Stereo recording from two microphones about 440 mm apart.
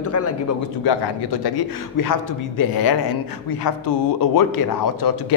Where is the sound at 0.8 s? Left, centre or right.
Left.